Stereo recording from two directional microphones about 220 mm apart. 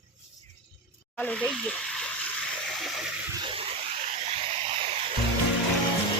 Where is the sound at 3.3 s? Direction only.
20° right (ahead or behind).